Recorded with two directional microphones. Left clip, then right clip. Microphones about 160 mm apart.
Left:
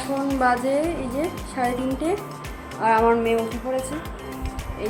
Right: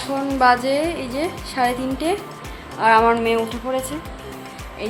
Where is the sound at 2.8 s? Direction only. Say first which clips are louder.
Right 4 dB; 5° right (ahead or behind).